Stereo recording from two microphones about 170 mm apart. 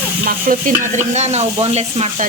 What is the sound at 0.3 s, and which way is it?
Stir, 50° right (ahead or behind).